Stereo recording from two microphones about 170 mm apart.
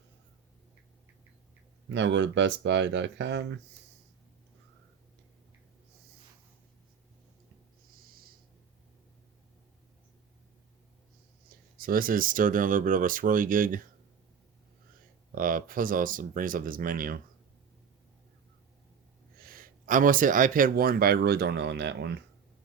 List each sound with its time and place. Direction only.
1.9 s speech: 90° right
11.4 s speech: 60° right (ahead or behind)
15.4 s speech: 55° right (ahead or behind)
19.4 s speech: 60° right (ahead or behind); by 22.2 s 85° right